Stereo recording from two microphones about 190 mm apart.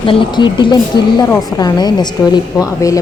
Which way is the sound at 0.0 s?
25° left (ahead or behind).